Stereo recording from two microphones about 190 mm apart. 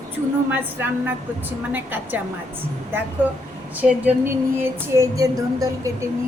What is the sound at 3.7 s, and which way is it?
A woman's voice, 10° right (ahead or behind).